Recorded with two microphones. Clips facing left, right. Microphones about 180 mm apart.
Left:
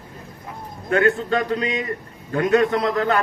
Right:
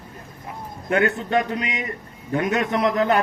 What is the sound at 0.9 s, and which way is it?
A man's voice, 20° right (ahead or behind).